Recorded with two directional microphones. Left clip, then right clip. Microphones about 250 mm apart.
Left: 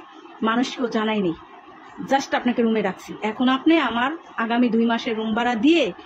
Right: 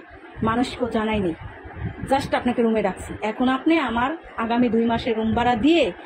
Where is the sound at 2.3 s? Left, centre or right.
Centre.